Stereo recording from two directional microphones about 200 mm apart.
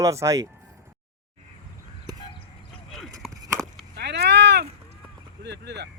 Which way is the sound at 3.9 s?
55° right (ahead or behind).